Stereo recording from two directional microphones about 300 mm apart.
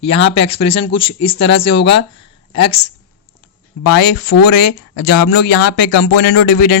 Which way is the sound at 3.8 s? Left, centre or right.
Left.